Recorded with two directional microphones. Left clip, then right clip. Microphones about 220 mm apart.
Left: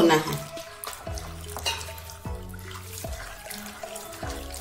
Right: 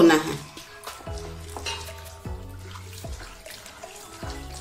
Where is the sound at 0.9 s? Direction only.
Centre (ahead or behind).